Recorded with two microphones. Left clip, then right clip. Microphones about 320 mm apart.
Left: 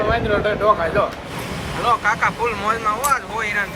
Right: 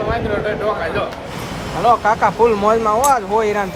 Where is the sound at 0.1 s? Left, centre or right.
Centre.